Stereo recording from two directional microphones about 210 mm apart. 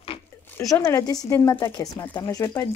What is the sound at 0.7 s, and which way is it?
Speech, 15° left (ahead or behind).